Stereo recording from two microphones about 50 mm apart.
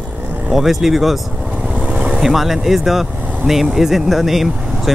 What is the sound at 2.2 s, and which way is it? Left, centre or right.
Speech, centre.